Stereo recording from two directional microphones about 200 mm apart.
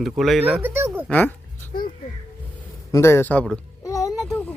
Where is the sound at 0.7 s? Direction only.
10° right (ahead or behind).